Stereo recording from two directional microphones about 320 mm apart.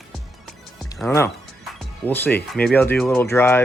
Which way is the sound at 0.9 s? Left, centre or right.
Centre.